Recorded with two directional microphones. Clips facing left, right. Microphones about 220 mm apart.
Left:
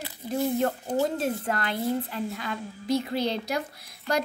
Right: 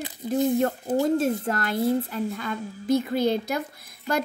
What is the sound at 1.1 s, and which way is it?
A woman's voice, 45° right (ahead or behind).